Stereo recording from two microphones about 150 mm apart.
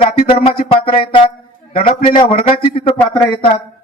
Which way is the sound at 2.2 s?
40° left (ahead or behind).